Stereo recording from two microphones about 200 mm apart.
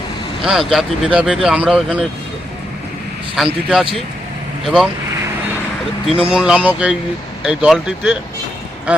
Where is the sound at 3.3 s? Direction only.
5° right (ahead or behind).